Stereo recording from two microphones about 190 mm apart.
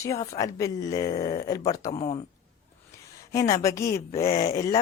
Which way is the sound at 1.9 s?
35° left (ahead or behind).